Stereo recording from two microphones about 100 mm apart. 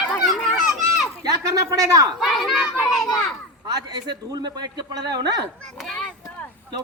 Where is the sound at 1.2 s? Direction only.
35° right (ahead or behind).